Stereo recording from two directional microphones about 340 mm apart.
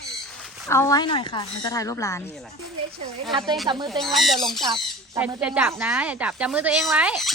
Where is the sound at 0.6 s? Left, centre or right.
Centre.